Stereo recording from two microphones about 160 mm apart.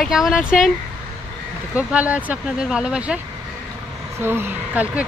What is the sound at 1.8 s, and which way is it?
Speech, 10° right (ahead or behind).